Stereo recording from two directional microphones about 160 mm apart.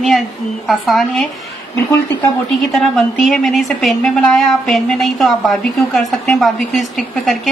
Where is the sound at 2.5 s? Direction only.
Centre (ahead or behind).